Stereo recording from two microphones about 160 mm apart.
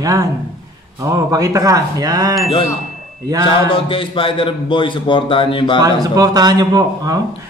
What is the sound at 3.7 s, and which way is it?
A man's voice, 35° left (ahead or behind).